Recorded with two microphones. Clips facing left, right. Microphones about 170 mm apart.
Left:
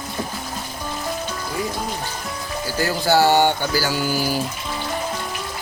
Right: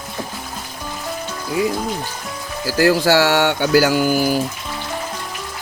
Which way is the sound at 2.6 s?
90° right.